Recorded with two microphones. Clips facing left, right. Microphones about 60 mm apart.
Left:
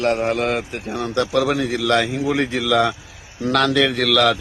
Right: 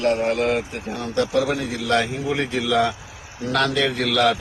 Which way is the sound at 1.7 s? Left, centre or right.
Left.